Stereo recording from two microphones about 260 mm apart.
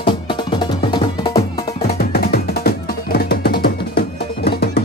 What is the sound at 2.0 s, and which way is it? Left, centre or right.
Music, left.